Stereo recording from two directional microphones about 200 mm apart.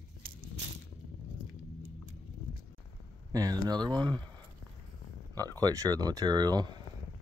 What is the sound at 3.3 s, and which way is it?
Speech, 20° right (ahead or behind).